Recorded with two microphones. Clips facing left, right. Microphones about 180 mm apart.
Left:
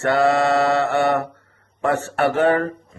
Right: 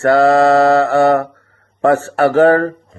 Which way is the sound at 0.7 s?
90° right.